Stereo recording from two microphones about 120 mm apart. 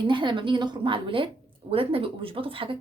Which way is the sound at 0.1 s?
40° right (ahead or behind).